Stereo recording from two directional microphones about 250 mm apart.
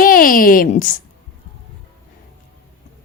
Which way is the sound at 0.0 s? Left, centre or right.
Left.